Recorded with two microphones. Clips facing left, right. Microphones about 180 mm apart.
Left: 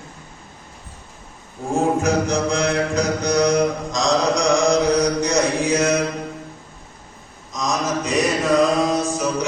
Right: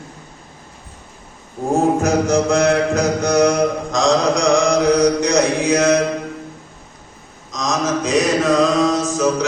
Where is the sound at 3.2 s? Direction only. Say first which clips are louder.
Right 4 dB; 50° right (ahead or behind).